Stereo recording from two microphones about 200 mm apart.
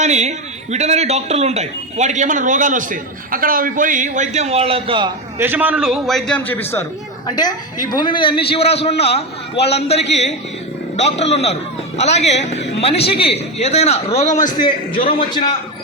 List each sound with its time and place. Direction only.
0.0 s a man's voice: 35° right (ahead or behind)
5.4 s a man's voice: 10° right (ahead or behind); by 14.5 s 35° left (ahead or behind)